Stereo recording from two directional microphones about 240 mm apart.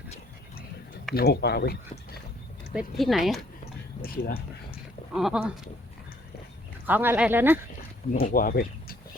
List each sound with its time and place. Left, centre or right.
1.1 s speech: left
2.7 s speech: centre
4.0 s speech: left
5.1 s speech: centre
6.8 s speech: centre
8.1 s speech: left